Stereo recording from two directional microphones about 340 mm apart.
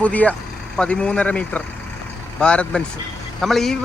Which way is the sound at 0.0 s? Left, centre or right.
Centre.